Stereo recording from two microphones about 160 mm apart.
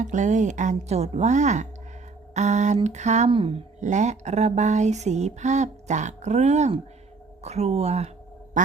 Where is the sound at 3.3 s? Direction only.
35° right (ahead or behind).